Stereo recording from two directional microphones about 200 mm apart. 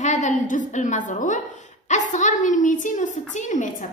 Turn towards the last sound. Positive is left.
turn(degrees=40)  # may be behind; listen again after turning